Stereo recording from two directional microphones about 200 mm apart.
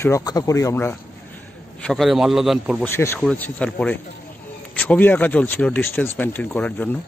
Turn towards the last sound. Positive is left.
turn(degrees=10)  # may be behind; listen again after turning